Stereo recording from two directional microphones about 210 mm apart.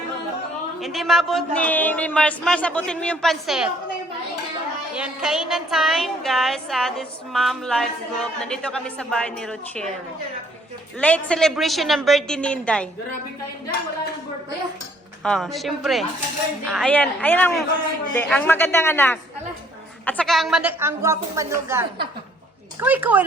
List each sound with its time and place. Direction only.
0.8 s a woman's voice: centre (ahead or behind)
4.9 s a woman's voice: 5° right (ahead or behind)
11.0 s a woman's voice: 5° left (ahead or behind)
15.2 s a woman's voice: centre (ahead or behind)